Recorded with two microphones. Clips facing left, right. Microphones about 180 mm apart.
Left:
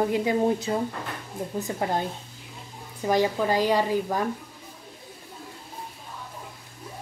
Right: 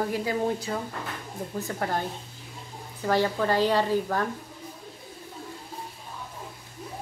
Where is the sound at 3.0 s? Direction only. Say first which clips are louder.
Left 1 dB; 15° left (ahead or behind).